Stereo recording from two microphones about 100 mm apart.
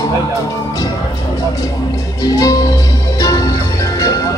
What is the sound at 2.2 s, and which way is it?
Music, 40° left (ahead or behind).